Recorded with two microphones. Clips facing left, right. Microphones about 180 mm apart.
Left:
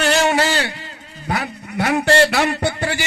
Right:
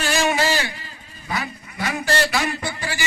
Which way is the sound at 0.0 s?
65° left (ahead or behind).